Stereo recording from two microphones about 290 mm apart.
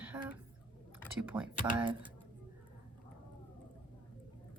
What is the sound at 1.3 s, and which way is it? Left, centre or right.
Speech, centre.